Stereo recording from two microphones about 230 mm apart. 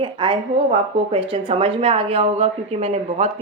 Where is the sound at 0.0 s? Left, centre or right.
Right.